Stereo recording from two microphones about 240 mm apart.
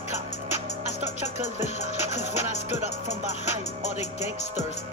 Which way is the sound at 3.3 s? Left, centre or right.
Left.